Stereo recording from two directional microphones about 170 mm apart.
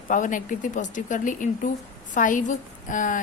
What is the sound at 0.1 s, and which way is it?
A woman's voice, 50° left (ahead or behind).